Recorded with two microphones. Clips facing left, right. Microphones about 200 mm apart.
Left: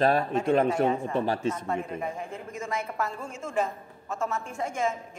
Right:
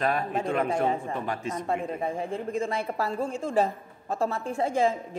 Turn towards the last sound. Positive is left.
turn(degrees=-30)  # may be behind; listen again after turning